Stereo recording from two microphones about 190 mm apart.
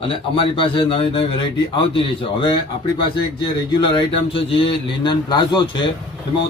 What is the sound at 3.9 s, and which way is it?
A man's voice, 25° left (ahead or behind).